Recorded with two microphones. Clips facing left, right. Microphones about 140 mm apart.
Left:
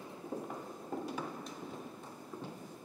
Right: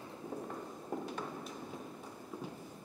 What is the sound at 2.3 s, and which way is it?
Clip-clop, 10° right (ahead or behind).